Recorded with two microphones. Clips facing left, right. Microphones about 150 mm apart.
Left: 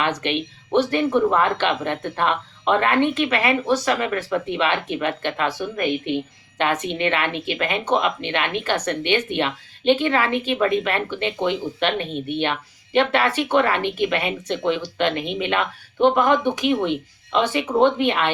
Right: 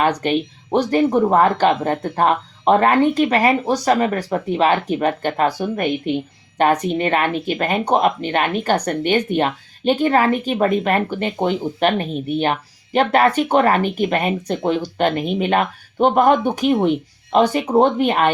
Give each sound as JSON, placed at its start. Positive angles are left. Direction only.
{"t": 0.0, "sound": "speech", "side_deg": -40}